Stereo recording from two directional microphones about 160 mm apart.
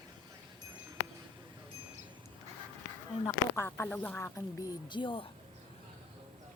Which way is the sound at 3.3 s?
15° left (ahead or behind).